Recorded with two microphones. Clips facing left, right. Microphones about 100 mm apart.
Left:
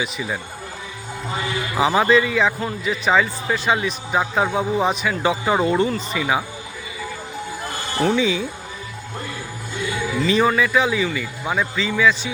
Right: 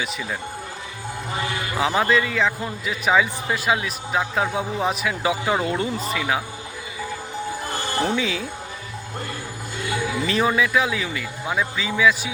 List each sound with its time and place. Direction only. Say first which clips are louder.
0.0 s speech: left 2 dB; 5° left (ahead or behind)
1.7 s a man's voice: left 4 dB; 5° left (ahead or behind)
8.1 s a man's voice: left 4 dB; centre (ahead or behind)
10.2 s a man's voice: left 4 dB; centre (ahead or behind)